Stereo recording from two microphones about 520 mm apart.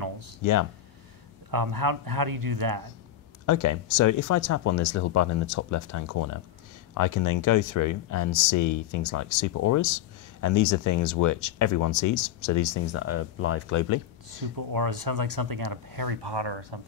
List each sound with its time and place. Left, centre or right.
0.4 s speech: left
1.5 s speech: right
3.4 s speech: left
14.7 s speech: right